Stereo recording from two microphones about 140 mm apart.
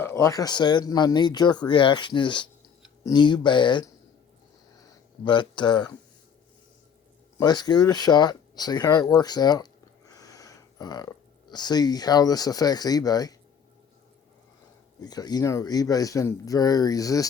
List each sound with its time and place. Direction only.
0.0 s speech: 15° left (ahead or behind); by 3.8 s 35° left (ahead or behind)
5.2 s speech: 35° left (ahead or behind)
7.3 s speech: 30° left (ahead or behind)
10.1 s a sound: 25° left (ahead or behind)
11.5 s speech: 30° left (ahead or behind)
15.0 s speech: 30° left (ahead or behind)